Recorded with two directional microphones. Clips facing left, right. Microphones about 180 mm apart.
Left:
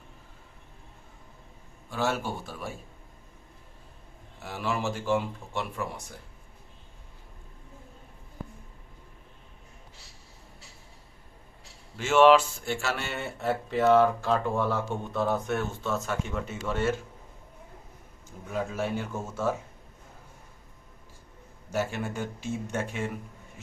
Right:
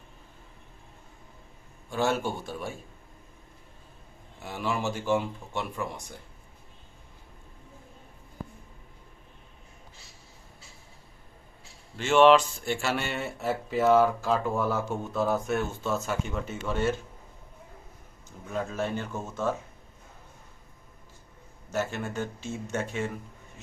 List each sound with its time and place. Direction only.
1.9 s speech: 5° left (ahead or behind)
4.4 s speech: 5° left (ahead or behind)
11.9 s speech: 5° left (ahead or behind)
18.3 s speech: 5° left (ahead or behind)
21.7 s speech: 10° left (ahead or behind)